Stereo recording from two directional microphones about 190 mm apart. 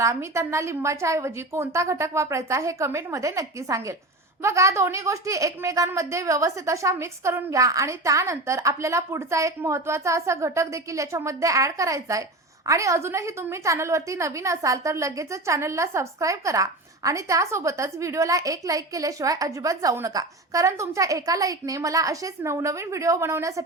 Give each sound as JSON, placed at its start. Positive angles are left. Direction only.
{"t": 0.0, "sound": "a woman's voice", "side_deg": -15}